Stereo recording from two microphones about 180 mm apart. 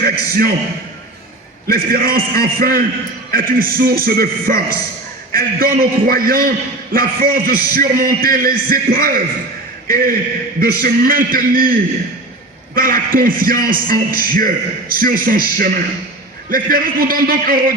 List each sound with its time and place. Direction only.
0.0 s a man's voice: 55° right (ahead or behind)
1.6 s a man's voice: 55° right (ahead or behind)